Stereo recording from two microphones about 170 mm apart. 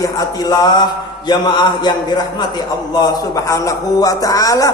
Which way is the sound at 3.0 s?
20° left (ahead or behind).